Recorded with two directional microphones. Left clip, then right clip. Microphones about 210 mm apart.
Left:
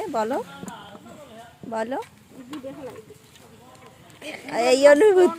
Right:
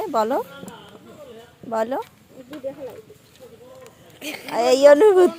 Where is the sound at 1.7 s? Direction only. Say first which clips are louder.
Right 4 dB; 10° right (ahead or behind).